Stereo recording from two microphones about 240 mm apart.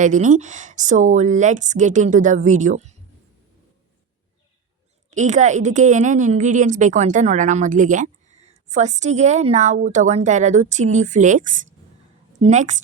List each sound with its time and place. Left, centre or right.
0.0 s a woman's voice: right
5.1 s a woman's voice: right